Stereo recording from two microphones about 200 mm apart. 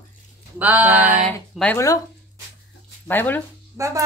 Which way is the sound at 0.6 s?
10° right (ahead or behind).